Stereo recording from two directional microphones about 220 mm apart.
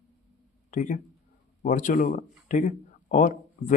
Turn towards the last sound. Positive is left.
turn(degrees=35)  # may be behind; listen again after turning